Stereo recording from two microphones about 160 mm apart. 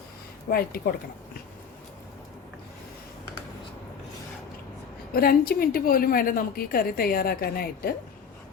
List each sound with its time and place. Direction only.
0.5 s a woman's voice: 70° left (ahead or behind)
5.1 s a woman's voice: 70° left (ahead or behind)